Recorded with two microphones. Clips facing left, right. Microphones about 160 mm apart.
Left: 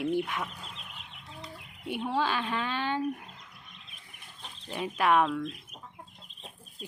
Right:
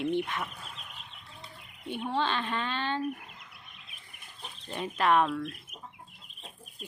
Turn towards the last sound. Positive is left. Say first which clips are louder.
# left 1 dB
turn(degrees=-10)  # may be behind; listen again after turning